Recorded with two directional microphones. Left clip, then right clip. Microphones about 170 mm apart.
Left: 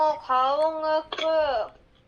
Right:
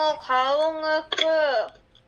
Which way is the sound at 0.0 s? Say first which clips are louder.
Even; 50° right (ahead or behind).